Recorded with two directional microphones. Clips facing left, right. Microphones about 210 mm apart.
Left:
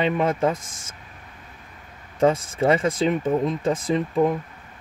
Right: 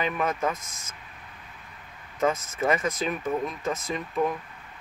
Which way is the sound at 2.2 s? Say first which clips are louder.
Left 6 dB; 30° left (ahead or behind).